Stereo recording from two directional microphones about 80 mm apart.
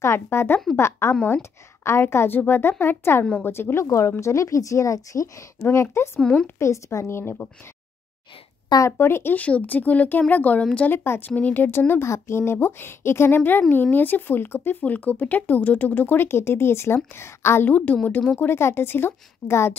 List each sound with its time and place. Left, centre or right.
0.0 s a woman's voice: left
3.8 s a woman's voice: left
5.6 s a woman's voice: left
8.8 s speech: left; by 10.9 s centre
10.9 s a woman's voice: left